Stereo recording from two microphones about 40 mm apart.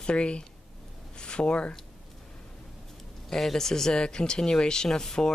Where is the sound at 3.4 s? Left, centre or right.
Centre.